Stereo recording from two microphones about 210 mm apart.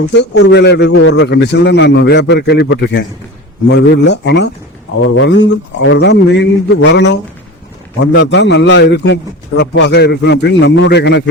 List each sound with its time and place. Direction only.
0.1 s a man's voice: 55° left (ahead or behind)